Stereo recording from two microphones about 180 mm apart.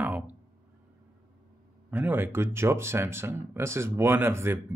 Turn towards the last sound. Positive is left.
turn(degrees=-15)  # may be behind; listen again after turning